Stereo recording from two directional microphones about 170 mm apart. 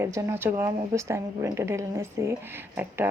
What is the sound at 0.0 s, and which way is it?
A woman's voice, 20° right (ahead or behind).